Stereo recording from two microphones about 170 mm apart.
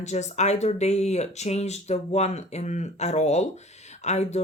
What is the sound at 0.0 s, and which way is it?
Speech, 40° left (ahead or behind).